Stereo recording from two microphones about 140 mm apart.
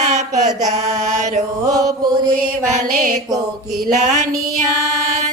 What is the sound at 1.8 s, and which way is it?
Mantra, 30° right (ahead or behind).